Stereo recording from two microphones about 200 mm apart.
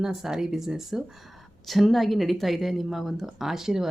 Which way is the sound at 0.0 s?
5° right (ahead or behind).